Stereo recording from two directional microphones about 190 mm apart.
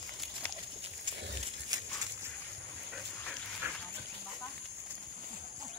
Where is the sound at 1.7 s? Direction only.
20° right (ahead or behind).